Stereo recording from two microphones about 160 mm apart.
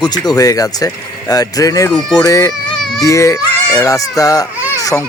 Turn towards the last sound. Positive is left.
turn(degrees=20)  # may be behind; listen again after turning